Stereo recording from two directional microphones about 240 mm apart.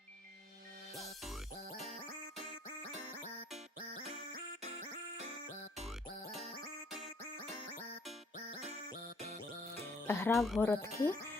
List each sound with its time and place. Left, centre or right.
0.9 s music: centre
4.3 s music: right
10.1 s speech: centre
10.7 s speech: centre